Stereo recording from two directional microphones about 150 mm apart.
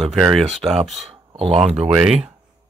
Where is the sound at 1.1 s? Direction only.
40° right (ahead or behind).